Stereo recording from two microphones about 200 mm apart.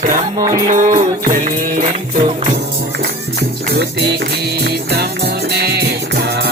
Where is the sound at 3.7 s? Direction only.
55° right (ahead or behind).